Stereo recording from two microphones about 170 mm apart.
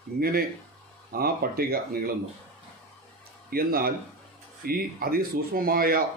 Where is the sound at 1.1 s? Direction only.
60° right (ahead or behind).